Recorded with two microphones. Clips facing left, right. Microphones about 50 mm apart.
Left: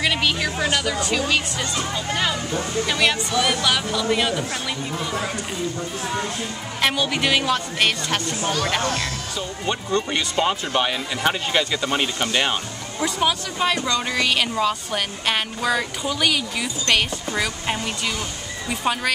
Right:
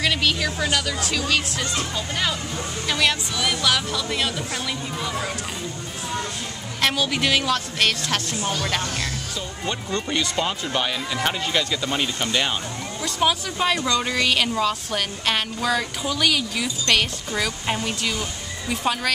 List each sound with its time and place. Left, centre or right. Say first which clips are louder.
0.0 s music: left 1 dB; centre
0.9 s speech: left 2 dB; centre
6.8 s speech: left 1 dB; centre
9.7 s speech: left 3 dB; centre
13.2 s a woman's voice: right 1 dB; centre